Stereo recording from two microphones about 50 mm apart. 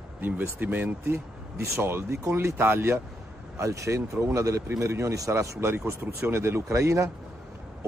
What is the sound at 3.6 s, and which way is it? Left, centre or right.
Speech, right.